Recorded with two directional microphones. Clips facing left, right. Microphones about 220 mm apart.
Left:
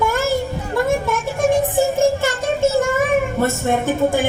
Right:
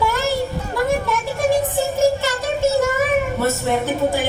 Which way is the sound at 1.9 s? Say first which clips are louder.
Left 1 dB; 50° left (ahead or behind).